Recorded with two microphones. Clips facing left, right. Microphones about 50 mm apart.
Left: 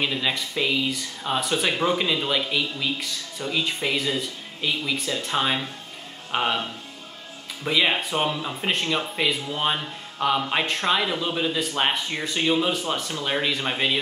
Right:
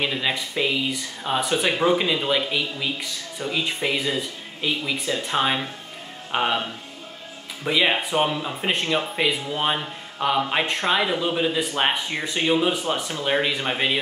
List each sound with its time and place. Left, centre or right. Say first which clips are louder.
0.0 s speech: right 1 dB; centre